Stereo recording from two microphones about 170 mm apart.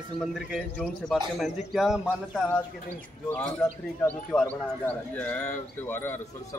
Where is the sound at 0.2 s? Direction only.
Centre (ahead or behind).